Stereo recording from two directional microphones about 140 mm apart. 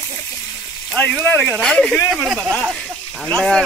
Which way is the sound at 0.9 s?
10° left (ahead or behind).